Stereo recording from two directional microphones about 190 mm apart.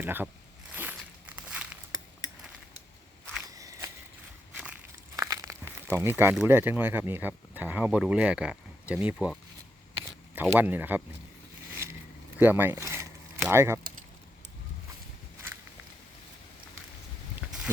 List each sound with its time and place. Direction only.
0.0 s speech: 10° right (ahead or behind)
0.7 s walk: 10° right (ahead or behind)
2.2 s a sound: 20° left (ahead or behind)
3.4 s walk: 20° right (ahead or behind)
5.1 s speech: 15° right (ahead or behind)
10.4 s speech: 10° right (ahead or behind)
11.7 s a sound: 15° right (ahead or behind)
12.4 s speech: 10° right (ahead or behind)